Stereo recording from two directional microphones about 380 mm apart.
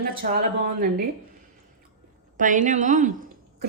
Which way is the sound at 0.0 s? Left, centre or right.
Right.